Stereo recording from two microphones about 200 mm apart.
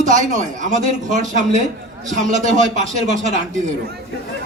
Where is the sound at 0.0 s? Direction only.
40° right (ahead or behind).